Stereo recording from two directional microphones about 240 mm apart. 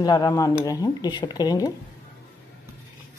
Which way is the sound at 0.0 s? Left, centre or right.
Centre.